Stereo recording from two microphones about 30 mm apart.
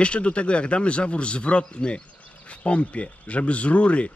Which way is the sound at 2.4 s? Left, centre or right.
Left.